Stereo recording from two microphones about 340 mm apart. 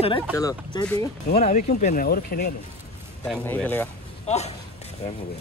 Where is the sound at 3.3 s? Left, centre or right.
Centre.